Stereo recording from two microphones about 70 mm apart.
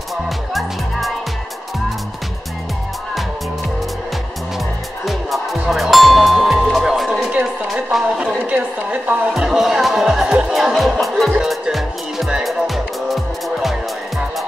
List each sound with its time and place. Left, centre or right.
0.1 s music: centre
5.0 s music: centre
7.4 s a sound: centre
8.5 s a woman's voice: right
9.4 s music: centre